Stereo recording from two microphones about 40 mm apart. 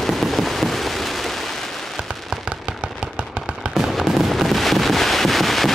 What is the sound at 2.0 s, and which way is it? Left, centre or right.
Fireworks, right.